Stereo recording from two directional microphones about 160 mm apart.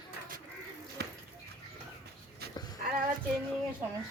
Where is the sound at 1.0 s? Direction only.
90° right.